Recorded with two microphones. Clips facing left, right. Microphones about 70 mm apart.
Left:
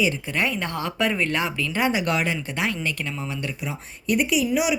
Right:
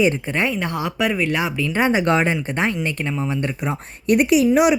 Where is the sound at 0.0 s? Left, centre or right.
Right.